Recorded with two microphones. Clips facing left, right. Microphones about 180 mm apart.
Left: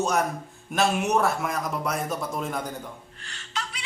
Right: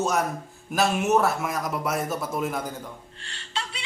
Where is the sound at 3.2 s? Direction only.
30° right (ahead or behind).